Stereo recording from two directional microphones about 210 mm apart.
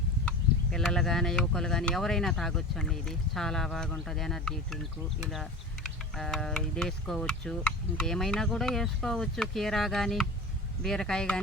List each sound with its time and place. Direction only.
0.3 s speech: centre (ahead or behind)